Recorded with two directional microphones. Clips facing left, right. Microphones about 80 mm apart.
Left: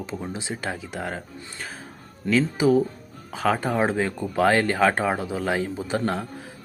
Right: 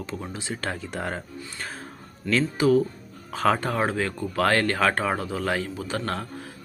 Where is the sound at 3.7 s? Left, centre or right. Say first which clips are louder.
Left 2 dB; centre.